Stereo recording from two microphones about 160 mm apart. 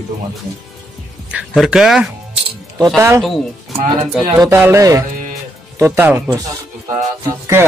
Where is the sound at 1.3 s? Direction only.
5° right (ahead or behind).